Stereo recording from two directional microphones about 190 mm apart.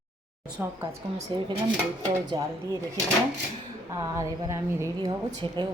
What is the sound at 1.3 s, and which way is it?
A woman's voice, 25° right (ahead or behind).